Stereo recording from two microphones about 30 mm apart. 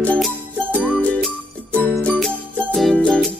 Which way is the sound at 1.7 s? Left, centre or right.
Left.